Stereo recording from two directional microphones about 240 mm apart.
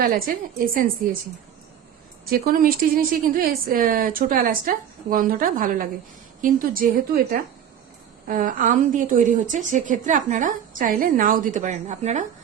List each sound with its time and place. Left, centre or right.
0.0 s a woman's voice: right
2.3 s a woman's voice: right